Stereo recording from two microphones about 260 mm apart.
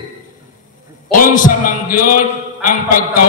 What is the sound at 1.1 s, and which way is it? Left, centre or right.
A man's voice, left.